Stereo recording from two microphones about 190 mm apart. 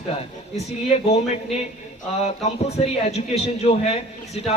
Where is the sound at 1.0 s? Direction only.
35° left (ahead or behind).